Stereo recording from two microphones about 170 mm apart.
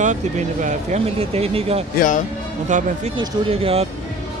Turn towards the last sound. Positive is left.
turn(degrees=-35)  # may be behind; listen again after turning